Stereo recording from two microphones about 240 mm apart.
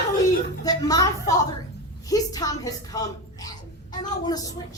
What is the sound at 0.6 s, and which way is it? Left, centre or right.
A woman's voice, centre.